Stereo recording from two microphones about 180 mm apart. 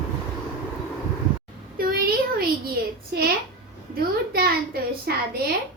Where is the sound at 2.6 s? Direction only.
55° right (ahead or behind).